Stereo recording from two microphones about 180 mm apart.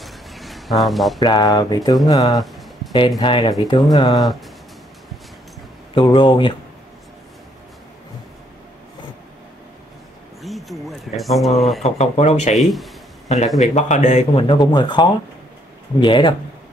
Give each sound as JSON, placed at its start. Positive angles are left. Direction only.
{"t": 0.0, "sound": "a sound", "side_deg": 0}
{"t": 1.2, "sound": "speech", "side_deg": 20}
{"t": 2.3, "sound": "music", "side_deg": 0}
{"t": 3.2, "sound": "speech", "side_deg": 25}
{"t": 5.9, "sound": "speech", "side_deg": 25}
{"t": 10.4, "sound": "speech", "side_deg": 0}
{"t": 11.8, "sound": "a man's voice", "side_deg": 35}
{"t": 12.5, "sound": "speech", "side_deg": 0}
{"t": 13.6, "sound": "a man's voice", "side_deg": 40}
{"t": 14.5, "sound": "speech", "side_deg": 25}